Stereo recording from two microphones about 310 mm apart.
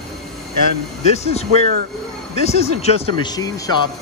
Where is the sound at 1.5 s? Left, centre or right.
Right.